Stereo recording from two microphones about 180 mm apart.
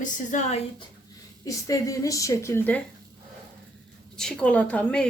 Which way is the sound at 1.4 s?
20° left (ahead or behind).